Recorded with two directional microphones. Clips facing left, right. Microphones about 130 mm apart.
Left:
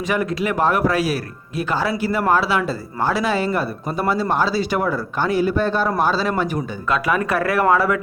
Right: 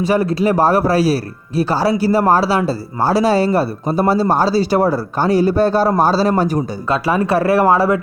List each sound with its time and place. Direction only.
0.0 s speech: 35° right (ahead or behind)